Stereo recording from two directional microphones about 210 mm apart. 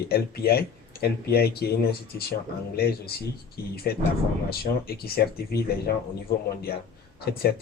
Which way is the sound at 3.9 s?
45° left (ahead or behind).